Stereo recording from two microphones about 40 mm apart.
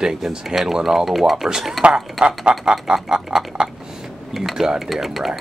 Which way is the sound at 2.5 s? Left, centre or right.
Right.